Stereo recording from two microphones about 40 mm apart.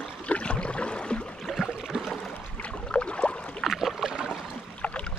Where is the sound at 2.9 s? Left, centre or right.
Left.